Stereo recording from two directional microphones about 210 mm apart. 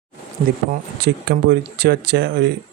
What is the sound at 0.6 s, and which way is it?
Speech, 50° right (ahead or behind).